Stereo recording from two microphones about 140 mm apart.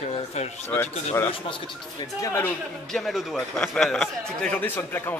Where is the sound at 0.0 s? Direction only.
50° left (ahead or behind).